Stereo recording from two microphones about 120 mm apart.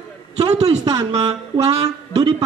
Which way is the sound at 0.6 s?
60° right (ahead or behind).